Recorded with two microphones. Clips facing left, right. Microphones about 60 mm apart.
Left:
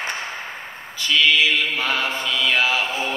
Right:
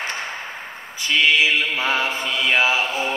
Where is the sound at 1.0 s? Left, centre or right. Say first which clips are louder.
Even; right.